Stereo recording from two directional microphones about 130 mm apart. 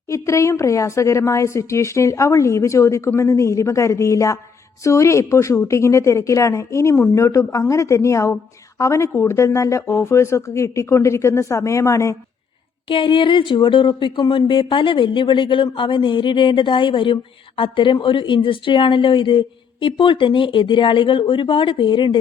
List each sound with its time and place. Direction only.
0.1 s a woman's voice: 25° left (ahead or behind)
12.9 s a woman's voice: 40° left (ahead or behind)